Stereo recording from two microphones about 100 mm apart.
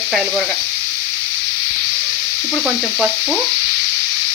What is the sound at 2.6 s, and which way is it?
Sizzle, 5° right (ahead or behind).